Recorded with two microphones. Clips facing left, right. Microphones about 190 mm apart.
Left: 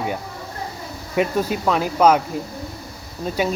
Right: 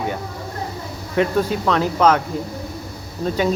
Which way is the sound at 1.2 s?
10° left (ahead or behind).